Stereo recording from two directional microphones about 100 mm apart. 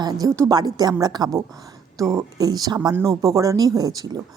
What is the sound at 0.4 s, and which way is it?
A woman's voice, 45° right (ahead or behind).